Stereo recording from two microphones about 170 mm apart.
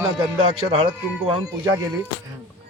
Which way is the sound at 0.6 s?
30° right (ahead or behind).